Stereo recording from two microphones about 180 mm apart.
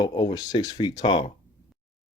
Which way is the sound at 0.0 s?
25° left (ahead or behind).